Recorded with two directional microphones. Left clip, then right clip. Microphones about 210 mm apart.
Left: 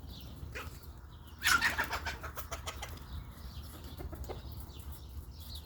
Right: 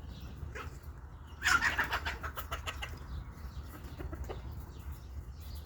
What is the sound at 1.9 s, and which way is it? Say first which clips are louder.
Bird: right 2 dB; 35° right (ahead or behind).